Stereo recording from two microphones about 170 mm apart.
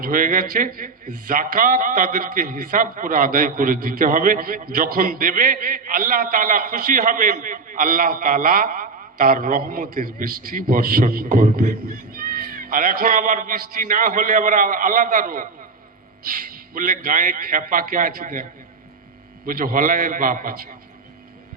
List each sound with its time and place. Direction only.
0.0 s a man's voice: 55° right (ahead or behind)
19.5 s a man's voice: 55° right (ahead or behind)